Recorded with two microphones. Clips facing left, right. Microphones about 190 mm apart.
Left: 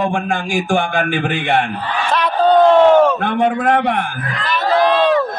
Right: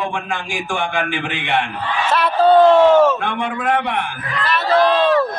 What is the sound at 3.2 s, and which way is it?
Speech, 40° left (ahead or behind).